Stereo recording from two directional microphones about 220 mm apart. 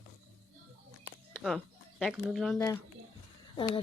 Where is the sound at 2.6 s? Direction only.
15° left (ahead or behind).